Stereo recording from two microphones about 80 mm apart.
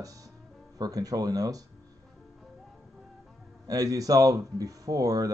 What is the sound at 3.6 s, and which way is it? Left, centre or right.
Speech, right.